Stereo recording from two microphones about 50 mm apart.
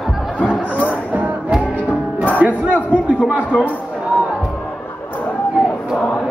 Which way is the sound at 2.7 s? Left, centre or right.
Left.